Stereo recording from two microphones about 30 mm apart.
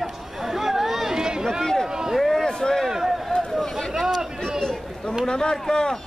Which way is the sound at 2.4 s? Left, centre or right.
Left.